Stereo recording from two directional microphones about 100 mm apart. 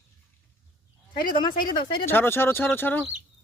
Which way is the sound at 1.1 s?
50° left (ahead or behind).